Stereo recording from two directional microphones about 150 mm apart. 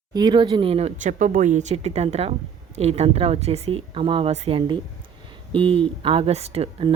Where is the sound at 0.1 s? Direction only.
30° right (ahead or behind).